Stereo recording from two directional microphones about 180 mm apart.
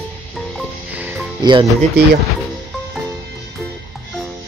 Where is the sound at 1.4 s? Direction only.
25° right (ahead or behind).